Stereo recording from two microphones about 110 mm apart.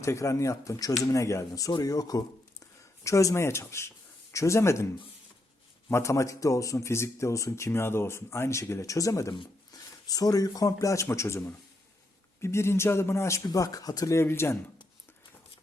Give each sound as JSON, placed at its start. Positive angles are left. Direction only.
{"t": 0.0, "sound": "speech", "side_deg": 25}
{"t": 5.9, "sound": "speech", "side_deg": 30}